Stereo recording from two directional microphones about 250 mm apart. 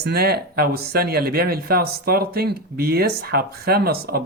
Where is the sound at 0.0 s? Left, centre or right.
Right.